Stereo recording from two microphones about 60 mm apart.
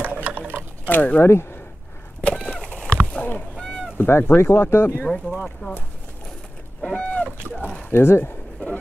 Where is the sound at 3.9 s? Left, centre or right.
Left.